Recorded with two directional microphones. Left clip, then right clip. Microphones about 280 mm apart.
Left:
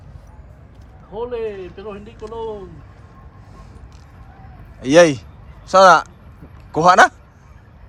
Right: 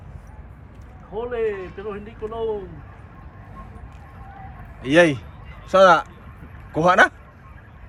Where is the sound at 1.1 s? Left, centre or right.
Centre.